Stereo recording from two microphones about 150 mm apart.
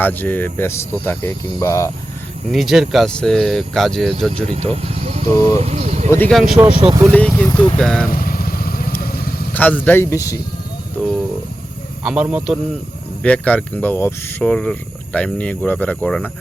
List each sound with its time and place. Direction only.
0.0 s speech: 10° left (ahead or behind)
1.5 s cricket: 20° left (ahead or behind)
2.5 s speech: centre (ahead or behind)
4.4 s speech: 40° right (ahead or behind)
5.5 s vehicle: 45° right (ahead or behind)
6.1 s speech: 10° left (ahead or behind)
6.3 s speech: centre (ahead or behind)
6.7 s speech: 35° right (ahead or behind)
7.1 s speech: 10° left (ahead or behind)
8.1 s vehicle: 75° left (ahead or behind)
9.5 s speech: 10° left (ahead or behind)
12.0 s speech: 5° right (ahead or behind)
13.2 s speech: 10° left (ahead or behind)